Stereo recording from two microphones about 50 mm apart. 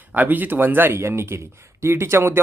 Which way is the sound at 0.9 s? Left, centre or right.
Right.